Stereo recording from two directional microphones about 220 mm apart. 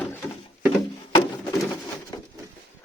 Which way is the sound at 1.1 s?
15° left (ahead or behind).